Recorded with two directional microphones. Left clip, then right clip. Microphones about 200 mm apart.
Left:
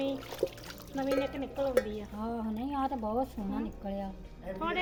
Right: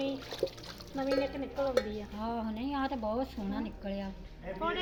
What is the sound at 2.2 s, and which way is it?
Speech, 45° left (ahead or behind).